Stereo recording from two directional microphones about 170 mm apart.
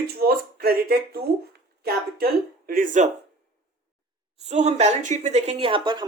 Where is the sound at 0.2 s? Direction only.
65° right (ahead or behind).